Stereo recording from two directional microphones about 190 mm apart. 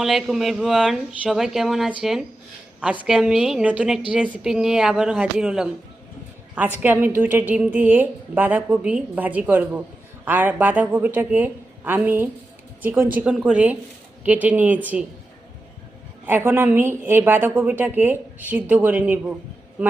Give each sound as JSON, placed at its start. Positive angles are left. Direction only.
{"t": 0.0, "sound": "speech", "side_deg": 0}
{"t": 6.7, "sound": "a woman's voice", "side_deg": -10}
{"t": 16.2, "sound": "a woman's voice", "side_deg": -10}